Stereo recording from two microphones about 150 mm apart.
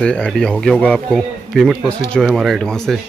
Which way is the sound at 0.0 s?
5° left (ahead or behind).